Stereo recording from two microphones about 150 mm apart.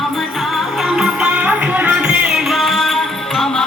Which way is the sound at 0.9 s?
5° right (ahead or behind).